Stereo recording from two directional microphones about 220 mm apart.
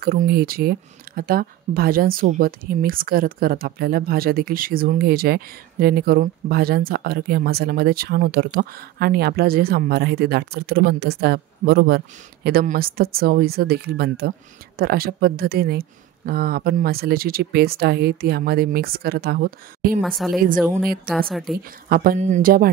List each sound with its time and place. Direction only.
0.0 s speech: 45° right (ahead or behind)
20.0 s a woman's voice: centre (ahead or behind)
21.8 s speech: 40° right (ahead or behind)